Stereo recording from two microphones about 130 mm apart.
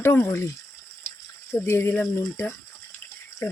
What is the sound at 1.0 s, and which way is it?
Frying, 15° left (ahead or behind).